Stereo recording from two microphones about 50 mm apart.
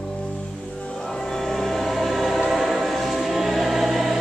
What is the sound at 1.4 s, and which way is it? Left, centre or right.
Train, centre.